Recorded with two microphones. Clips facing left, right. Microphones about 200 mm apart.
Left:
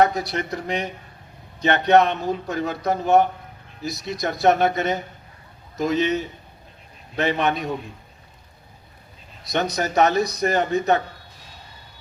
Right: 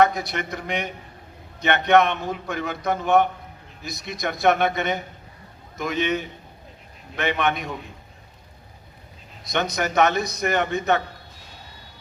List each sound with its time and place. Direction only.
0.0 s a man's voice: 35° left (ahead or behind)
9.5 s a man's voice: 35° left (ahead or behind)